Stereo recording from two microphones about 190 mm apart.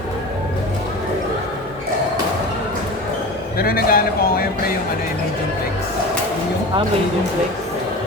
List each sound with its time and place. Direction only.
3.6 s speech: 50° left (ahead or behind)